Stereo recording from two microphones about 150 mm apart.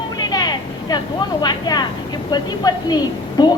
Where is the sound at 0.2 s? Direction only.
25° left (ahead or behind).